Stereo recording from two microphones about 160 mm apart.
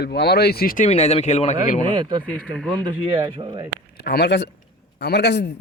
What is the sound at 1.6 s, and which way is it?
Speech, 55° left (ahead or behind).